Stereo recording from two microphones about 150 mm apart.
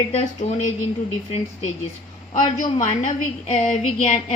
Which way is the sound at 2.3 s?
55° left (ahead or behind).